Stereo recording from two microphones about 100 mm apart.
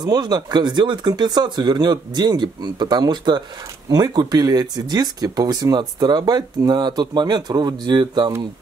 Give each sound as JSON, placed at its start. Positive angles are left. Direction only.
{"t": 0.0, "sound": "speech", "side_deg": -40}